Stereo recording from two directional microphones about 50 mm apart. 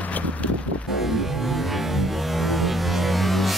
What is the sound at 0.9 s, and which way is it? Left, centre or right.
Music, centre.